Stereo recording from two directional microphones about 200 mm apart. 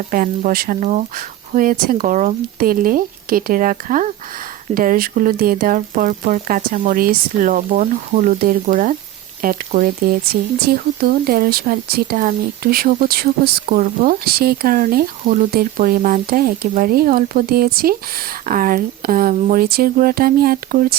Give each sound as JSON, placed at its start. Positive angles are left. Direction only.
{"t": 0.1, "sound": "speech", "side_deg": -45}